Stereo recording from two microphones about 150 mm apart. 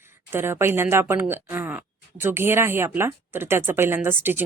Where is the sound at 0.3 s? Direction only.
15° right (ahead or behind).